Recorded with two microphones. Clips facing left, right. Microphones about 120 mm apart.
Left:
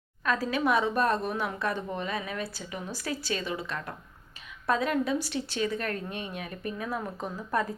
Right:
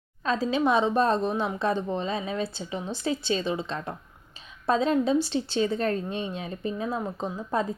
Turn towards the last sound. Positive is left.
turn(degrees=-20)  # may be behind; listen again after turning